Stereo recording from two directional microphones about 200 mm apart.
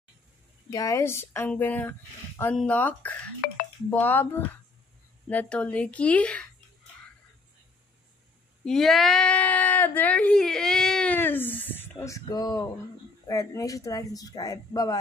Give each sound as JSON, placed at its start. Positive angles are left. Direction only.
{"t": 0.7, "sound": "speech", "side_deg": 15}
{"t": 3.4, "sound": "speech", "side_deg": 50}
{"t": 3.9, "sound": "speech", "side_deg": 10}
{"t": 8.6, "sound": "speech", "side_deg": 0}